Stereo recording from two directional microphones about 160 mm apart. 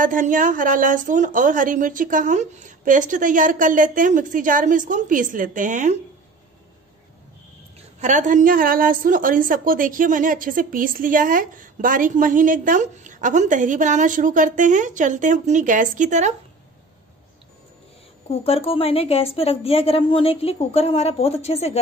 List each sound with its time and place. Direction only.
0.0 s a woman's voice: 55° right (ahead or behind)
8.0 s a woman's voice: 50° right (ahead or behind)
18.3 s a woman's voice: 35° left (ahead or behind)